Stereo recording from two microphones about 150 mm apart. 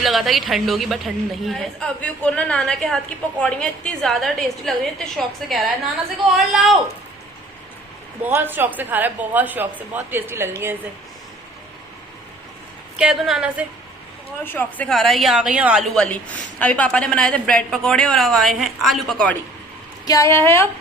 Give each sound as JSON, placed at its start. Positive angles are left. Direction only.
{"t": 0.0, "sound": "a woman's voice", "side_deg": 0}
{"t": 8.2, "sound": "a woman's voice", "side_deg": -15}
{"t": 13.0, "sound": "a woman's voice", "side_deg": -5}
{"t": 14.4, "sound": "a woman's voice", "side_deg": 10}
{"t": 16.0, "sound": "a woman's voice", "side_deg": 10}
{"t": 20.1, "sound": "a woman's voice", "side_deg": 20}